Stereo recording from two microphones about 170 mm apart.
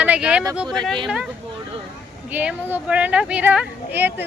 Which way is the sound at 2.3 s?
10° right (ahead or behind).